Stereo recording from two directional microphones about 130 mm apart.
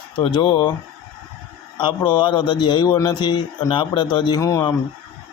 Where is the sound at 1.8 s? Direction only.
35° left (ahead or behind).